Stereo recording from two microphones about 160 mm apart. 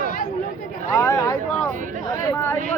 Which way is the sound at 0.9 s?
20° left (ahead or behind).